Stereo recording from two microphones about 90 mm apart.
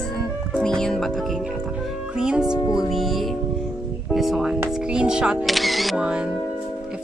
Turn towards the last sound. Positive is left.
turn(degrees=0)  # may be behind; listen again after turning